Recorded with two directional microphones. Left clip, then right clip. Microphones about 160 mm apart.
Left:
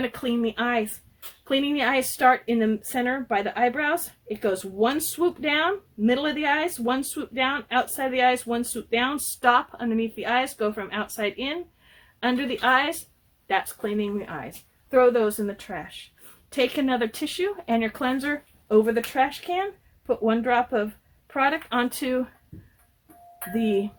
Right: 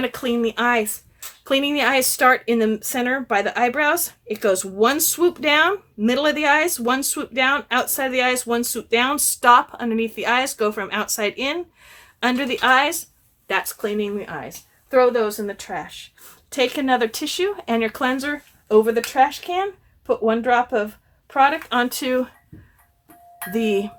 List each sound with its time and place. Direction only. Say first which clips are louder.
0.0 s speech: right 5 dB; 5° right (ahead or behind)
14.8 s speech: right 2 dB; 15° left (ahead or behind); by 22.3 s 5° right (ahead or behind)
23.5 s speech: right 4 dB; 10° right (ahead or behind)